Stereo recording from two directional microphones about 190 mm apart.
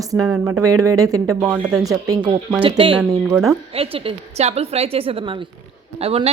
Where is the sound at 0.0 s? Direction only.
20° right (ahead or behind).